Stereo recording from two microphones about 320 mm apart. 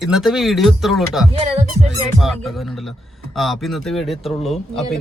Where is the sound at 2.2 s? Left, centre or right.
Centre.